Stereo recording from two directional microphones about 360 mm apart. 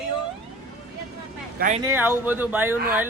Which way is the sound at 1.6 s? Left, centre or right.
Right.